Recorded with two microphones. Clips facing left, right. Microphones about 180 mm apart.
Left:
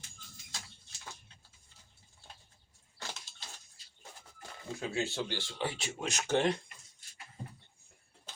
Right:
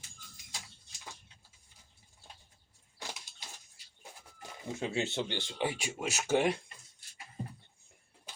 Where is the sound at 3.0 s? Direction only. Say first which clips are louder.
Right 1 dB; 15° right (ahead or behind).